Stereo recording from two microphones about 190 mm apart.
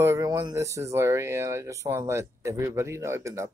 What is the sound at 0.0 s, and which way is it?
Speech, 15° right (ahead or behind).